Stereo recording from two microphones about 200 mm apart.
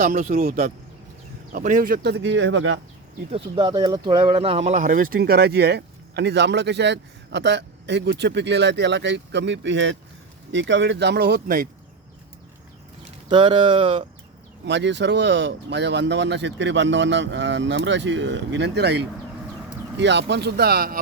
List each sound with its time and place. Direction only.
0.0 s a man's voice: 45° right (ahead or behind); by 2.8 s 70° right (ahead or behind)
3.3 s speech: 25° right (ahead or behind); by 11.7 s 45° right (ahead or behind)
13.2 s speech: 25° right (ahead or behind)
14.6 s speech: 60° right (ahead or behind)